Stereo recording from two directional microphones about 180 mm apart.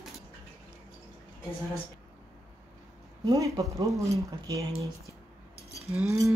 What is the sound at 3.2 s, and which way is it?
Speech, 20° right (ahead or behind).